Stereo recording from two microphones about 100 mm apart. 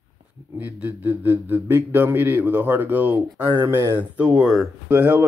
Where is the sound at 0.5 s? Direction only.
15° right (ahead or behind).